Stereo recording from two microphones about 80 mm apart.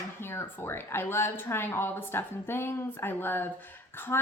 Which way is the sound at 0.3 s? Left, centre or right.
Left.